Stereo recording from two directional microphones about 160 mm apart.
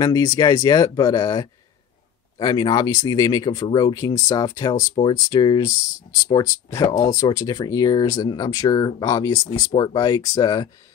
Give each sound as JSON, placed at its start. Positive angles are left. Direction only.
{"t": 0.0, "sound": "speech", "side_deg": 20}